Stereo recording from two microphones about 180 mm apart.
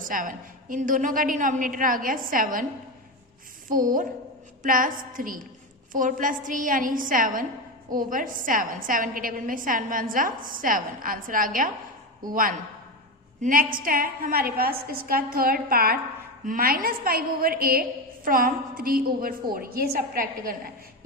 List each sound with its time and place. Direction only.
0.0 s a woman's voice: 50° right (ahead or behind)
3.7 s a woman's voice: 50° right (ahead or behind)